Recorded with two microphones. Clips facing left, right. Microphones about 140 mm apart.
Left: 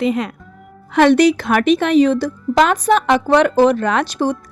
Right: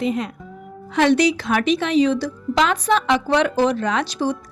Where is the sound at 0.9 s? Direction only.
55° left (ahead or behind).